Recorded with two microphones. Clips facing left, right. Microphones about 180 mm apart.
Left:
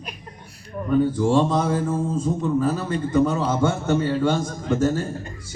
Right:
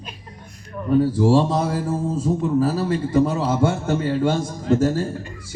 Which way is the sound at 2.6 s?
35° right (ahead or behind).